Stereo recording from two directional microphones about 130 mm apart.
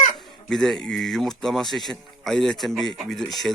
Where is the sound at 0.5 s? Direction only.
5° left (ahead or behind).